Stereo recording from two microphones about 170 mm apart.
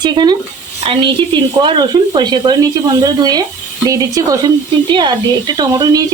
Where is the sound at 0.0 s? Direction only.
25° right (ahead or behind).